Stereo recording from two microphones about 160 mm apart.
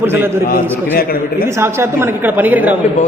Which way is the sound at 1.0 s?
70° left (ahead or behind).